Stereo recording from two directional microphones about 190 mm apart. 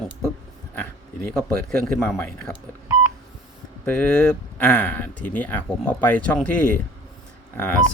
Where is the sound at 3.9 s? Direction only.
5° left (ahead or behind).